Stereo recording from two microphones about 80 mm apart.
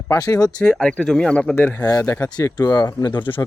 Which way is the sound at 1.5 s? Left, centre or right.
Left.